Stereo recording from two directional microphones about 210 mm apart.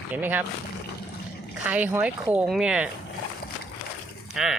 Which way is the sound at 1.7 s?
10° right (ahead or behind).